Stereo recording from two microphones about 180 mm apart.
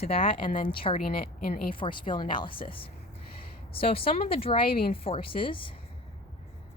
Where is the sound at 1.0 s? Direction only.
55° left (ahead or behind).